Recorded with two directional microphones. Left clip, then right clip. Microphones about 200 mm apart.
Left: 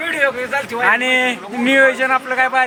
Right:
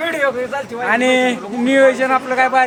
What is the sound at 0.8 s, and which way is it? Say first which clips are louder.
A man's voice: right 1 dB; 5° left (ahead or behind).